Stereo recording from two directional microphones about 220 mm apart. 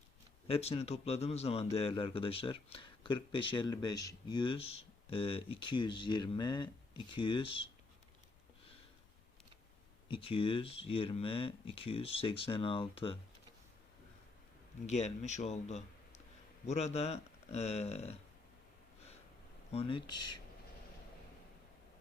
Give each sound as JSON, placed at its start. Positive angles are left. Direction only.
{"t": 0.4, "sound": "a man's voice", "side_deg": 25}
{"t": 10.1, "sound": "a man's voice", "side_deg": 25}
{"t": 14.8, "sound": "a man's voice", "side_deg": 30}
{"t": 19.7, "sound": "a man's voice", "side_deg": 25}